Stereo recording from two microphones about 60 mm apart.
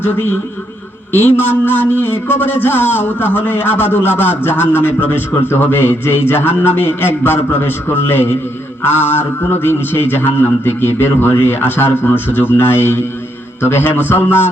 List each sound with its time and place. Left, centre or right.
0.0 s a man's voice: left